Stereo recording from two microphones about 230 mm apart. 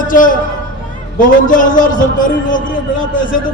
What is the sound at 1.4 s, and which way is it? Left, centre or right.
A man's voice, left.